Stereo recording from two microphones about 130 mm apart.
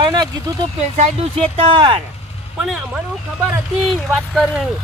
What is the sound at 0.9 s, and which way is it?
Speech, 50° right (ahead or behind).